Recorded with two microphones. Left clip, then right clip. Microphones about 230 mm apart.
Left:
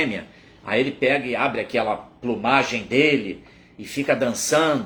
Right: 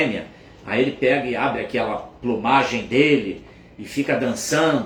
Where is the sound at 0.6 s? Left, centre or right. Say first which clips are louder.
Right 1 dB; centre.